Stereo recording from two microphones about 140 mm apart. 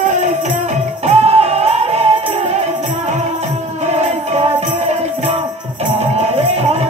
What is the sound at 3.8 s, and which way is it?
Music, 50° right (ahead or behind).